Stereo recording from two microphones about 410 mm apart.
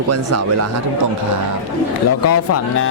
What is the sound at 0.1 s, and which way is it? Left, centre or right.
Speech, right.